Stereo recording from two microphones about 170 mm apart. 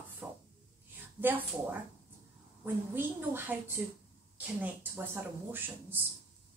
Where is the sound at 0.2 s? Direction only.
15° right (ahead or behind).